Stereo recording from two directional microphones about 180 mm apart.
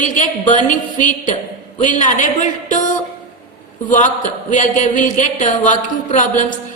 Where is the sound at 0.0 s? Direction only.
45° left (ahead or behind).